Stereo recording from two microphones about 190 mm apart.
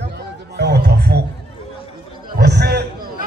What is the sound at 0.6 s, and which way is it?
Music, 60° right (ahead or behind).